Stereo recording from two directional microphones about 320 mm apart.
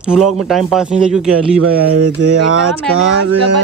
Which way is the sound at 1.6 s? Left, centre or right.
Right.